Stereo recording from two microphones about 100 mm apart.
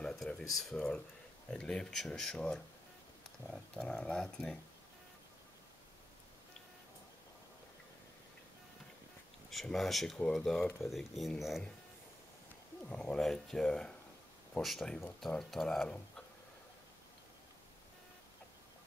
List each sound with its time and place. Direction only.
0.0 s speech: 5° left (ahead or behind)
3.7 s speech: 10° left (ahead or behind)
9.5 s speech: centre (ahead or behind)
12.8 s speech: 10° left (ahead or behind)